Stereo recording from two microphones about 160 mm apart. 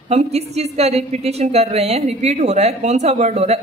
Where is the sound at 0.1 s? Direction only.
40° right (ahead or behind).